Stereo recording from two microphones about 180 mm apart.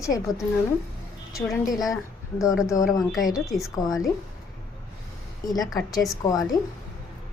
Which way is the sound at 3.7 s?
20° left (ahead or behind).